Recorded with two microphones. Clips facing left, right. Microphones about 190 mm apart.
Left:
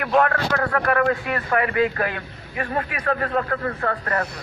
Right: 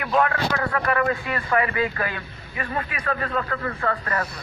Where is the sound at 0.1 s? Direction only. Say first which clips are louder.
Left 2 dB; 50° left (ahead or behind).